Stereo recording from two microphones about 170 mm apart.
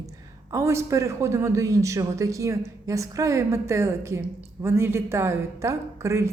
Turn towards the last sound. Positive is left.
turn(degrees=-15)  # may be behind; listen again after turning